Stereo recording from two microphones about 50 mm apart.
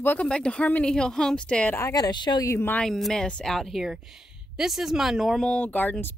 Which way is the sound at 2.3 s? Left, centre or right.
Left.